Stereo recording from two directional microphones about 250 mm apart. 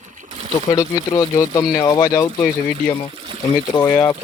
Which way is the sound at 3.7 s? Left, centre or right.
Centre.